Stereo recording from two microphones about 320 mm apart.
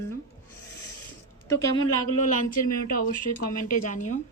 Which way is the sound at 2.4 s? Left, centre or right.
Left.